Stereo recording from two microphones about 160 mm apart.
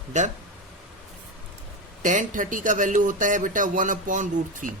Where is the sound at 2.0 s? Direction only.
55° right (ahead or behind).